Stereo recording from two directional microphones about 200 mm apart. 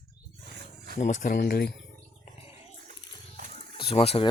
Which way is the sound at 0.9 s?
35° left (ahead or behind).